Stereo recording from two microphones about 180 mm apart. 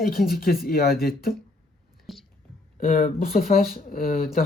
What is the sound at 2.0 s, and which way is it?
Whispering, centre (ahead or behind).